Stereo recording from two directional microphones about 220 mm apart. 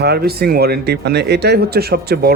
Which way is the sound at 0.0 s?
45° right (ahead or behind).